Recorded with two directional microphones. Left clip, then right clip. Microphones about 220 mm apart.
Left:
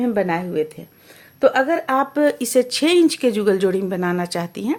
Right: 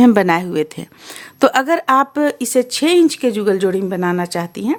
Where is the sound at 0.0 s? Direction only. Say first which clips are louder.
Right 8 dB; 40° right (ahead or behind).